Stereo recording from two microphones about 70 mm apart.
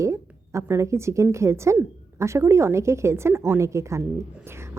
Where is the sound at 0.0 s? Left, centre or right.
Right.